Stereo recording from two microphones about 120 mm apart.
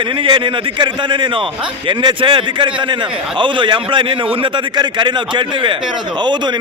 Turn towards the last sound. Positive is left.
turn(degrees=-40)  # may be behind; listen again after turning